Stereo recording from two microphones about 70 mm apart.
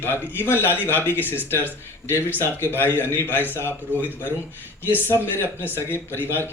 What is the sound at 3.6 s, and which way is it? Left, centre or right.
Speech, right.